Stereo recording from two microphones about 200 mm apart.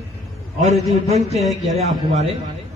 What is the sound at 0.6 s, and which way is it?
Speech, 35° right (ahead or behind).